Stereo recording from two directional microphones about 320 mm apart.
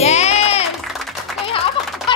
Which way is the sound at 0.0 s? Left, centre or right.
Centre.